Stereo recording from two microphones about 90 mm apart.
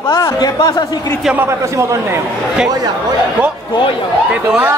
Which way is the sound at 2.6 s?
45° right (ahead or behind).